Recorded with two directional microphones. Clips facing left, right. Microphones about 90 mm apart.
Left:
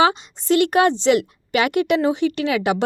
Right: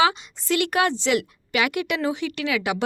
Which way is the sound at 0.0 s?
30° left (ahead or behind).